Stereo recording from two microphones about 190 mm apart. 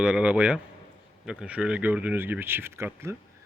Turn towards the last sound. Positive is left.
turn(degrees=-15)  # may be behind; listen again after turning